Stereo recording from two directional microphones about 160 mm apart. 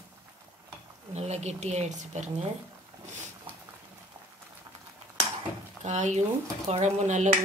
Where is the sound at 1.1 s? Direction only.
45° right (ahead or behind).